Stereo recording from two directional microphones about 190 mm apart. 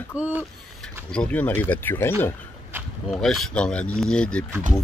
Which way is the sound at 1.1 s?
5° left (ahead or behind).